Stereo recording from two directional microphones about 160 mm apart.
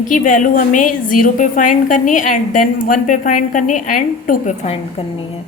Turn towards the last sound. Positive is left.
turn(degrees=35)  # may be behind; listen again after turning